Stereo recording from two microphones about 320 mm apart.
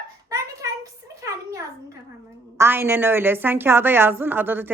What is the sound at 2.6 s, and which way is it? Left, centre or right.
A woman's voice, centre.